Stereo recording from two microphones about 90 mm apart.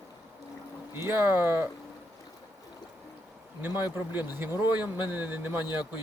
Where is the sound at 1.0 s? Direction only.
25° right (ahead or behind).